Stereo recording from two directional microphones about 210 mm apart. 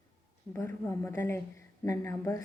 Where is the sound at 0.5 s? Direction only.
15° left (ahead or behind).